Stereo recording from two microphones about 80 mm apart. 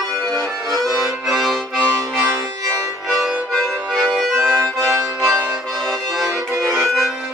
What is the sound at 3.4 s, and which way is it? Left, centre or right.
Accordion, centre.